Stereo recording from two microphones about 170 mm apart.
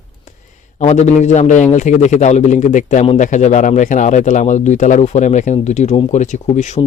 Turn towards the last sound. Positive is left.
turn(degrees=40)  # may be behind; listen again after turning